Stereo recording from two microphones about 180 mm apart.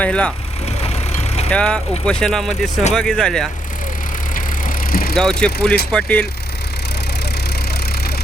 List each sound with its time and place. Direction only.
0.0 s speech: 5° left (ahead or behind)
1.5 s speech: 5° left (ahead or behind)
4.9 s vehicle: 55° left (ahead or behind)
5.1 s speech: 5° left (ahead or behind)